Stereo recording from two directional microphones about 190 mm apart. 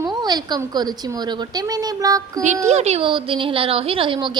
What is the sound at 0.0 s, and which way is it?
A woman's voice, 20° right (ahead or behind).